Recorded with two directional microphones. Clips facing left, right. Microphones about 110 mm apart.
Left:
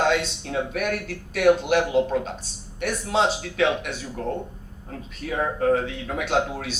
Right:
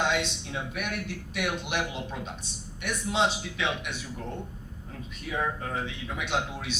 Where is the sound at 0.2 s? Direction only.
50° left (ahead or behind).